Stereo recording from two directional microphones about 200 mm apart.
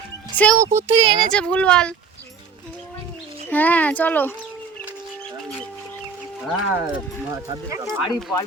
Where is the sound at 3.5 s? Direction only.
10° left (ahead or behind).